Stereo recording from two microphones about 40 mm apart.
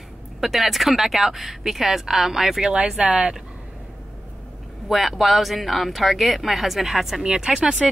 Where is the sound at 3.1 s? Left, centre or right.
Right.